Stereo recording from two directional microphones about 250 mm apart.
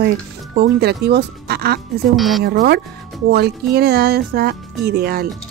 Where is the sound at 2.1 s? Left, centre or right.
Centre.